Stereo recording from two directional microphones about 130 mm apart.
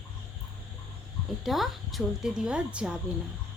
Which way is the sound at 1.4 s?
Centre (ahead or behind).